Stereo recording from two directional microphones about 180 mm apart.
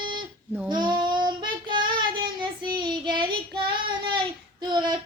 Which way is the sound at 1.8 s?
55° right (ahead or behind).